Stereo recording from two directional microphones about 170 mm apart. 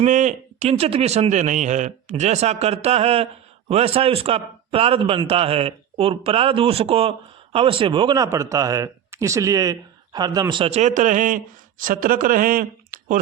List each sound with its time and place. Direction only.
0.0 s a man's voice: 45° right (ahead or behind)